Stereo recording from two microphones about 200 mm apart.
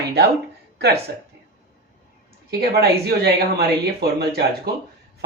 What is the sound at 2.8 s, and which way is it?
Speech, 50° right (ahead or behind).